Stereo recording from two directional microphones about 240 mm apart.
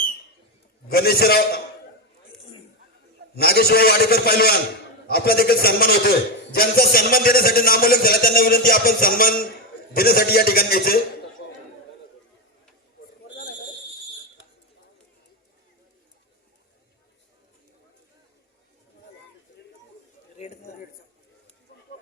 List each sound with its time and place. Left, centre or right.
0.9 s a man's voice: left
3.3 s a man's voice: left